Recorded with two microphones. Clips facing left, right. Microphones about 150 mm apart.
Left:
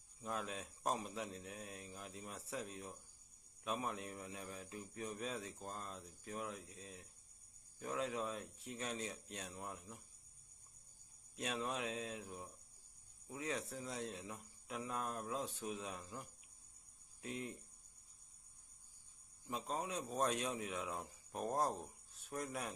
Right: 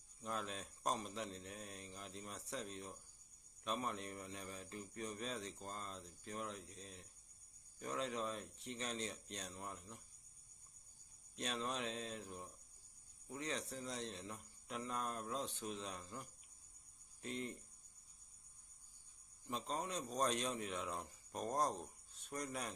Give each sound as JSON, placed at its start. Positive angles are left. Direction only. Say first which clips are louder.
{"t": 0.2, "sound": "a man's voice", "louder": "left 1 dB", "side_deg": 5}
{"t": 11.3, "sound": "a man's voice", "louder": "left 1 dB", "side_deg": 5}
{"t": 19.5, "sound": "a man's voice", "louder": "left 1 dB", "side_deg": 5}